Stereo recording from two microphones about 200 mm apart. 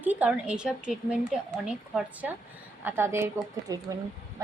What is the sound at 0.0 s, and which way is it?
A woman's voice, 5° right (ahead or behind).